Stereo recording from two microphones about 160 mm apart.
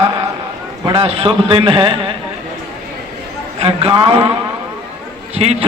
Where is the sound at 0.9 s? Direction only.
35° right (ahead or behind).